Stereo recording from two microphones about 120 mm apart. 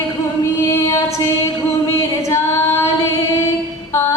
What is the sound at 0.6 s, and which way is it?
Female singing, 25° left (ahead or behind).